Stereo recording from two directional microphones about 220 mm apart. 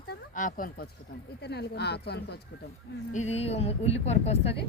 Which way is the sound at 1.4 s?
50° left (ahead or behind).